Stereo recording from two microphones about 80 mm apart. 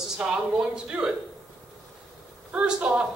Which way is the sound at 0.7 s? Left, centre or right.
Centre.